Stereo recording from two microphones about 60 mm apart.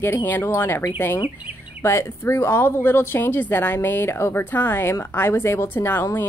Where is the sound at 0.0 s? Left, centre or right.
Left.